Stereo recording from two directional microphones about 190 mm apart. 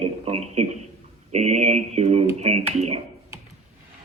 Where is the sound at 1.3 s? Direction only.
35° right (ahead or behind).